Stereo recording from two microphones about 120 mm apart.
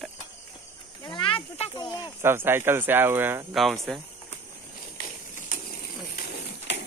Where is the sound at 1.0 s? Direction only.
40° left (ahead or behind).